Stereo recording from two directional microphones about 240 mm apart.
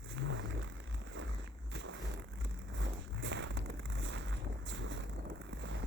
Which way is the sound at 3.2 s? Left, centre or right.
Right.